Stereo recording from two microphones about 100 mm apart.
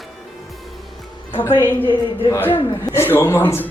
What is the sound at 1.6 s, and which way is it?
A man's voice, 20° left (ahead or behind).